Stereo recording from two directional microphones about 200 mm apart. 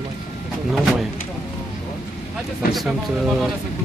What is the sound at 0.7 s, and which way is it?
Speech, centre (ahead or behind).